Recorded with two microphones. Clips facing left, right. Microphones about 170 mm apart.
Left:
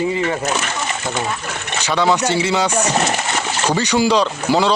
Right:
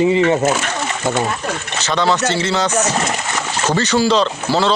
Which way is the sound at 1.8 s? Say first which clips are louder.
Even; 15° left (ahead or behind).